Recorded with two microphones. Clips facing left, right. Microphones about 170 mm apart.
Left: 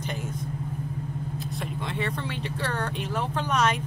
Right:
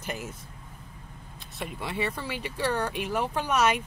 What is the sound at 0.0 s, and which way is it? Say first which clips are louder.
Vehicle: left 2 dB; 5° right (ahead or behind).